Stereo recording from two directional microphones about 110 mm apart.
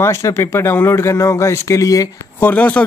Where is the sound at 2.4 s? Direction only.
15° left (ahead or behind).